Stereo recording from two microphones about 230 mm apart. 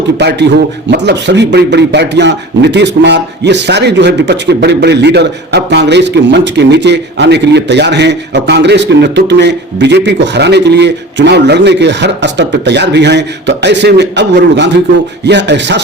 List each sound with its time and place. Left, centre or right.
0.2 s a man's voice: right